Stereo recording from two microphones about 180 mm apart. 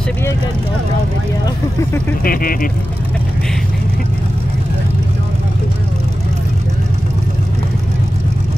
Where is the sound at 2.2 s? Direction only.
50° left (ahead or behind).